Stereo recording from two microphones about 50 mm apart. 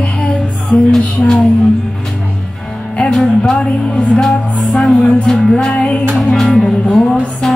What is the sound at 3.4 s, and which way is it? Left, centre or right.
Music, left.